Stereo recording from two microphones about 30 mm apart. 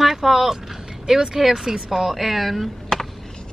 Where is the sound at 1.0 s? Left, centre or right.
Centre.